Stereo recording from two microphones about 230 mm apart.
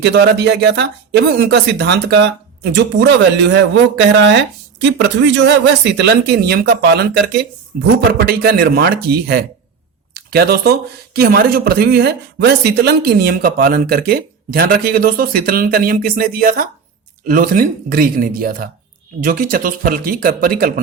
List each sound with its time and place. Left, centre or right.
0.0 s speech: right